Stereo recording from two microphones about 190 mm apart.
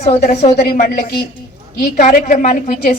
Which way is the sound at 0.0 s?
35° left (ahead or behind).